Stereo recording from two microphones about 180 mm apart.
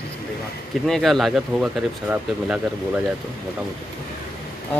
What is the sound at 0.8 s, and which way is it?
Speech, centre (ahead or behind).